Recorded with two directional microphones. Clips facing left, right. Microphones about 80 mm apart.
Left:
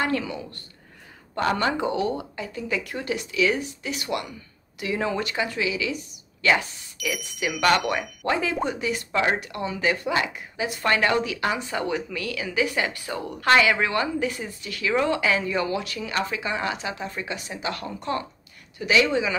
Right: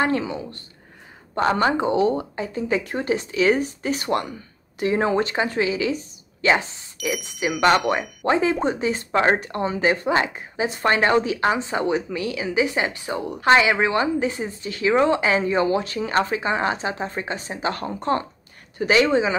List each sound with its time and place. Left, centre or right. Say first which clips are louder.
0.0 s speech: right 4 dB; right